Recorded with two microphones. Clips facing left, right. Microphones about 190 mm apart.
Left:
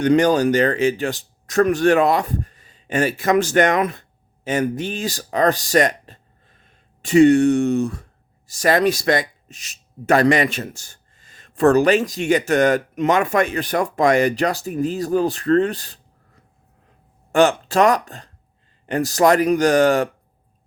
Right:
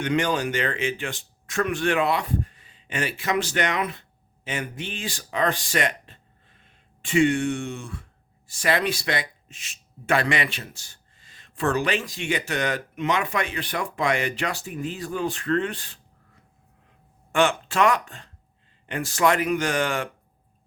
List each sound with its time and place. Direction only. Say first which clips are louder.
0.0 s speech: left 9 dB; 40° left (ahead or behind)